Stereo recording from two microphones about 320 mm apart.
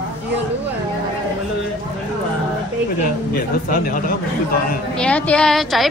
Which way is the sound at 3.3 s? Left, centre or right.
Left.